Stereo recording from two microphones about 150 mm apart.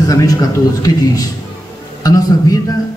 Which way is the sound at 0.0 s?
25° left (ahead or behind).